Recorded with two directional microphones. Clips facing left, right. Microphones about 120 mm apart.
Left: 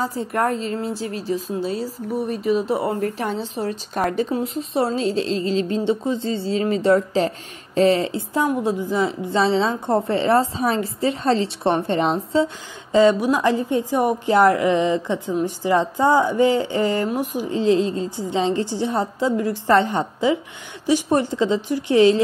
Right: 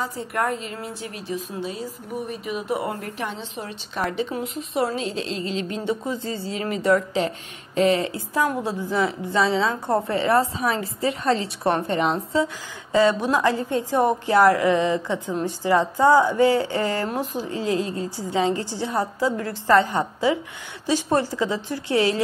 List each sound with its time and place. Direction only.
0.0 s a woman's voice: 35° left (ahead or behind); by 17.6 s 15° left (ahead or behind)
17.6 s a woman's voice: 25° left (ahead or behind)